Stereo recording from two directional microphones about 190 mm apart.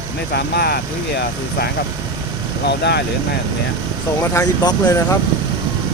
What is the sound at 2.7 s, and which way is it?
Speech, 60° left (ahead or behind).